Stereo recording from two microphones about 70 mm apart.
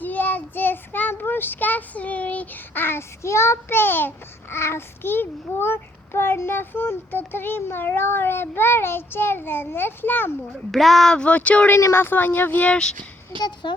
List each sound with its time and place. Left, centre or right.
0.0 s a child's voice: left
10.7 s speech: centre
11.2 s speech: centre
11.8 s speech: left; by 12.9 s centre
13.4 s speech: left